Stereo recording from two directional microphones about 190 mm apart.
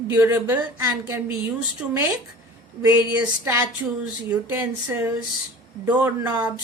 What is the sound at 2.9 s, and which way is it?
A woman's voice, 10° right (ahead or behind).